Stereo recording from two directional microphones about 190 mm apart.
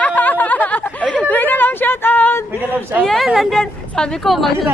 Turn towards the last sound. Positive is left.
turn(degrees=0)  # may be behind; listen again after turning